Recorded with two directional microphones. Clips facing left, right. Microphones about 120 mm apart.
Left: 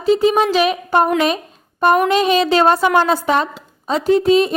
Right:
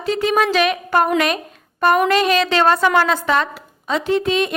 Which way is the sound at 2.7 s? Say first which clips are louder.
Left 1 dB; 20° left (ahead or behind).